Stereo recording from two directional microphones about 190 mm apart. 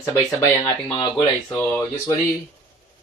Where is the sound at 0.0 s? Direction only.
15° left (ahead or behind).